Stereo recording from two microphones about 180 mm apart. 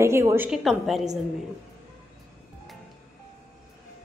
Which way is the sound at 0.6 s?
Centre (ahead or behind).